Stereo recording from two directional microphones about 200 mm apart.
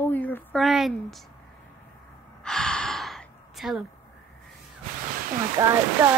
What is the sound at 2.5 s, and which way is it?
Gasp, 5° left (ahead or behind).